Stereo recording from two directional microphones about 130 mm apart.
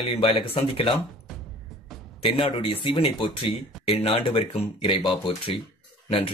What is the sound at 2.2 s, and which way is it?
Speech, 45° left (ahead or behind).